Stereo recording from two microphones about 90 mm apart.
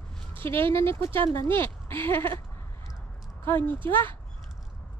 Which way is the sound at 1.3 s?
25° left (ahead or behind).